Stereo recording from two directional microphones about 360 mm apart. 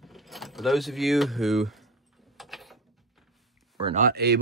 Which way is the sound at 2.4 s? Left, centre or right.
Centre.